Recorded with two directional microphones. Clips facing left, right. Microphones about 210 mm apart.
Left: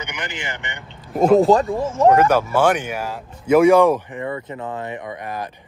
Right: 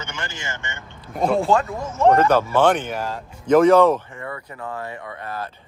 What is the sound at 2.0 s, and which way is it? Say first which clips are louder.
Speech: left 1 dB; 10° left (ahead or behind).